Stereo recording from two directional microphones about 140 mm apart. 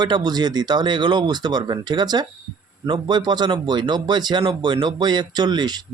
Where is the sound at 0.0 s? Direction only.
30° right (ahead or behind).